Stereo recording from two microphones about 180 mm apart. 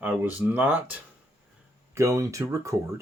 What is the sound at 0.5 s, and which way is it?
Speech, 10° right (ahead or behind).